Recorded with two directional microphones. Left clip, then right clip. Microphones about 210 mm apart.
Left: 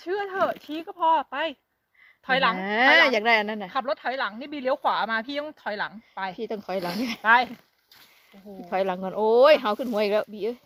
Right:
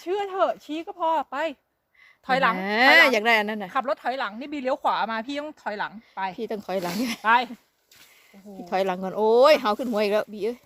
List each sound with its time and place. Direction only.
0.0 s speech: 15° left (ahead or behind)
2.6 s speech: centre (ahead or behind)
3.7 s speech: 20° left (ahead or behind); by 6.3 s 35° left (ahead or behind)
6.3 s speech: centre (ahead or behind)
6.7 s speech: 35° left (ahead or behind)
8.7 s speech: centre (ahead or behind)